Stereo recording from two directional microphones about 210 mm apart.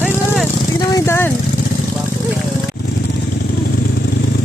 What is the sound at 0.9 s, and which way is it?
Vehicle, 10° left (ahead or behind).